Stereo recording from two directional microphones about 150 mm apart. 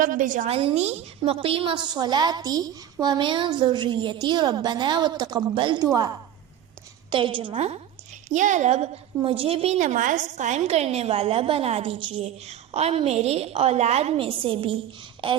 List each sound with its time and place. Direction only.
0.0 s a woman's voice: 65° right (ahead or behind)
0.4 s a woman's voice: 40° right (ahead or behind); by 6.1 s 25° right (ahead or behind)
7.1 s a woman's voice: 35° right (ahead or behind)
8.3 s a woman's voice: 55° right (ahead or behind); by 15.4 s 35° right (ahead or behind)